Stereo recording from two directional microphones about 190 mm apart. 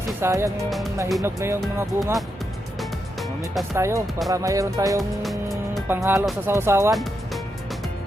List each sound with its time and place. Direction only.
0.2 s music: 15° right (ahead or behind)
0.7 s speech: centre (ahead or behind)
1.2 s music: 15° right (ahead or behind)
3.8 s music: 15° right (ahead or behind)